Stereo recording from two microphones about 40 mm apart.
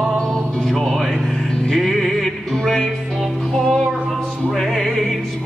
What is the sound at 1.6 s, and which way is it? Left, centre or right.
Music, centre.